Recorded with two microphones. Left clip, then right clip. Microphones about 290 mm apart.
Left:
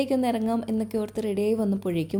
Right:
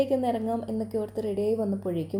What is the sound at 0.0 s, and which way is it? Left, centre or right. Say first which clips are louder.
A woman's voice: even; left.